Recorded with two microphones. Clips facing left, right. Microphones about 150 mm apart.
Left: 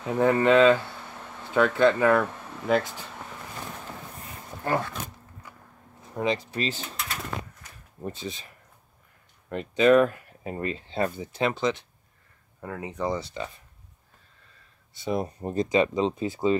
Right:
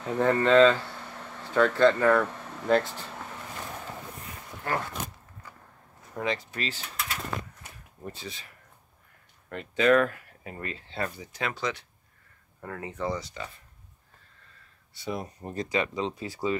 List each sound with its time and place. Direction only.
0.0 s speech: 10° left (ahead or behind)
6.1 s speech: 15° left (ahead or behind)
8.0 s speech: 20° left (ahead or behind)
9.5 s speech: 20° left (ahead or behind)
15.0 s speech: 25° left (ahead or behind)